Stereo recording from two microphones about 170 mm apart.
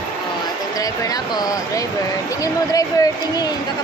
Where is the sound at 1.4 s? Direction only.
20° left (ahead or behind).